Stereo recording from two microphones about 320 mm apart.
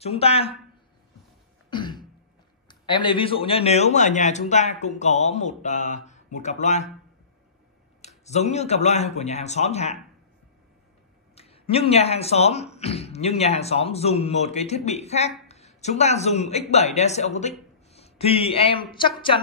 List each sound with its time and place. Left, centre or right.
0.0 s speech: centre
1.7 s throat clearing: centre
2.7 s speech: centre
8.3 s speech: left
11.3 s a man's voice: centre